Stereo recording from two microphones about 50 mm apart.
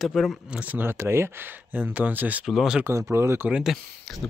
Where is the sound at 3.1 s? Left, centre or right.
Right.